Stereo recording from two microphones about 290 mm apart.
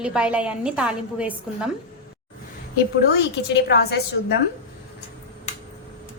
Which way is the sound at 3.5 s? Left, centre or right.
Left.